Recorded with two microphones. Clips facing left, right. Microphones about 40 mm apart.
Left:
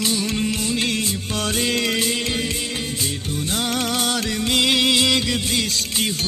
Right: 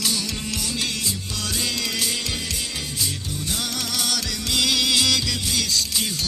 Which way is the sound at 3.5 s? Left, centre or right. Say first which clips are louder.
Left 6 dB; left.